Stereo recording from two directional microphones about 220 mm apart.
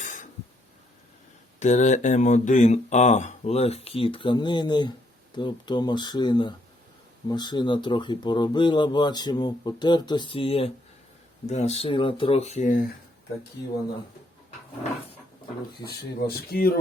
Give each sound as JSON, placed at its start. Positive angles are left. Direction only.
{"t": 0.0, "sound": "a sound", "side_deg": 35}
{"t": 1.5, "sound": "speech", "side_deg": 35}
{"t": 16.2, "sound": "speech", "side_deg": 45}